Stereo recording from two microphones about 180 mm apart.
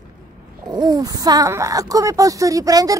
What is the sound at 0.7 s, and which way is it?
Speech, 25° right (ahead or behind).